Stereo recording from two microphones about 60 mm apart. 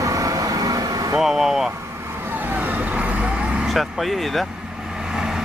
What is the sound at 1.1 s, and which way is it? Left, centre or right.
Speech, centre.